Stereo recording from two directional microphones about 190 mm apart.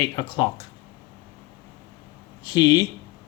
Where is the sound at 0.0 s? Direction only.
20° left (ahead or behind).